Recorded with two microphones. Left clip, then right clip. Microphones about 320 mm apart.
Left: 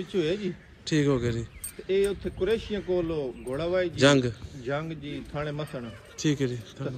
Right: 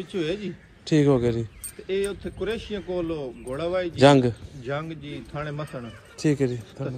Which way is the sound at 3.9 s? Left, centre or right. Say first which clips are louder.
Right 7 dB; centre.